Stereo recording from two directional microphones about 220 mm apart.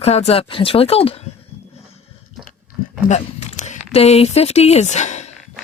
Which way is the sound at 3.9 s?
30° left (ahead or behind).